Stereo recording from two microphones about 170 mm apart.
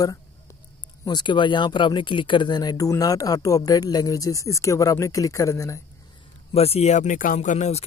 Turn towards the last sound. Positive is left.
turn(degrees=45)  # may be behind; listen again after turning